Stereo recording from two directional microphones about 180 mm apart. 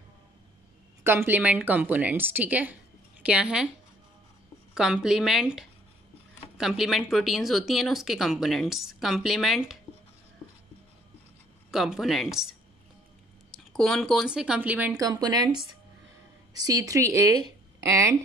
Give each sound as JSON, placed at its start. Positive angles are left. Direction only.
{"t": 1.0, "sound": "a woman's voice", "side_deg": -10}
{"t": 4.7, "sound": "speech", "side_deg": -5}
{"t": 11.7, "sound": "speech", "side_deg": 0}
{"t": 13.7, "sound": "speech", "side_deg": 5}
{"t": 15.0, "sound": "speech", "side_deg": -20}